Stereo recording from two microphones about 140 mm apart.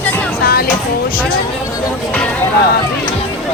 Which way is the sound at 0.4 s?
90° left.